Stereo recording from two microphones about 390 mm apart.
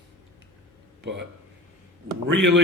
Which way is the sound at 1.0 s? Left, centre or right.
Right.